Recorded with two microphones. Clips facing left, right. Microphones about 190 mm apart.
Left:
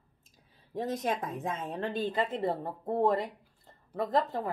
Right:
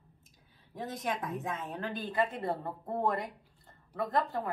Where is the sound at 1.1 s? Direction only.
30° left (ahead or behind).